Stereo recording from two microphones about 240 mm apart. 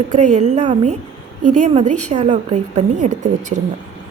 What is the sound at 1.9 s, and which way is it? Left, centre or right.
Speech, right.